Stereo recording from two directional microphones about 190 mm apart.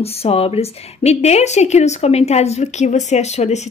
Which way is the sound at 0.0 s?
30° left (ahead or behind).